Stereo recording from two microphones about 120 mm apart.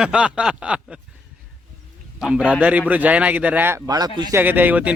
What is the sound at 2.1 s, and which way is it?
Speech, 5° right (ahead or behind).